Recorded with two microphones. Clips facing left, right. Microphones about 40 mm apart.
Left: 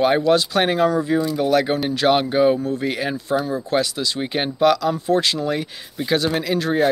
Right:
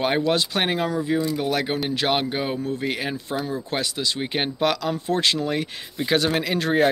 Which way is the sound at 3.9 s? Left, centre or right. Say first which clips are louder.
Left 2 dB; right.